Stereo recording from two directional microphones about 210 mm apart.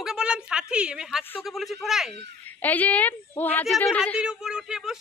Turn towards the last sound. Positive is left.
turn(degrees=-5)  # may be behind; listen again after turning